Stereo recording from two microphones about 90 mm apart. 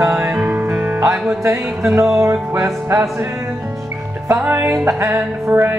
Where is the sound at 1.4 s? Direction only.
30° right (ahead or behind).